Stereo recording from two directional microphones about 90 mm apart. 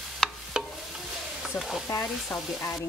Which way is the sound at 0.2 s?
5° left (ahead or behind).